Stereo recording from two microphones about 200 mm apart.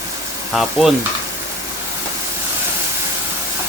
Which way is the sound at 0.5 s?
Centre (ahead or behind).